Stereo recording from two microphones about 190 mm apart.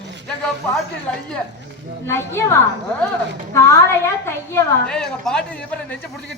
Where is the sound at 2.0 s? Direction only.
10° left (ahead or behind).